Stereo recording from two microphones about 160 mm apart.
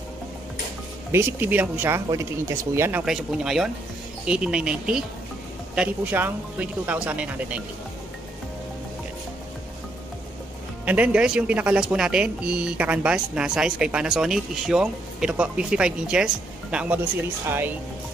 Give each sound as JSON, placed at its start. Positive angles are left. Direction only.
{"t": 1.1, "sound": "speech", "side_deg": -10}
{"t": 3.1, "sound": "speech", "side_deg": -5}
{"t": 10.9, "sound": "speech", "side_deg": -10}
{"t": 17.5, "sound": "speech", "side_deg": -15}